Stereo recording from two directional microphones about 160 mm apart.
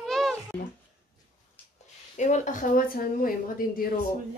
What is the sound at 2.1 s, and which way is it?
Speech, 45° left (ahead or behind).